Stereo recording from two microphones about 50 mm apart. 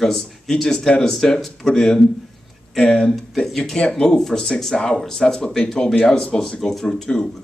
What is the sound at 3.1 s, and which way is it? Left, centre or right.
Speech, centre.